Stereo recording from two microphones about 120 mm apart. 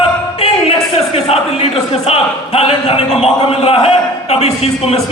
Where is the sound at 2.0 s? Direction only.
55° left (ahead or behind).